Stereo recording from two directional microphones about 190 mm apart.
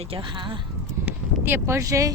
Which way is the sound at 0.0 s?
30° right (ahead or behind).